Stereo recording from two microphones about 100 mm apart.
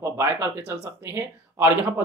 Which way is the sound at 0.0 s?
30° right (ahead or behind).